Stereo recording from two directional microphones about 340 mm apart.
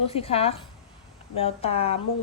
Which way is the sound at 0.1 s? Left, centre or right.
Centre.